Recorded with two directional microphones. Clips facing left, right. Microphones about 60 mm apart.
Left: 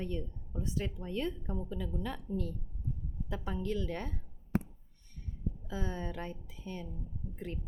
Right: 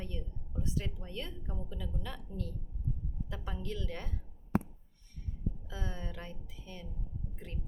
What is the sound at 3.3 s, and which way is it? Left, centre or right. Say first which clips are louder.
Speech: left 6 dB; left.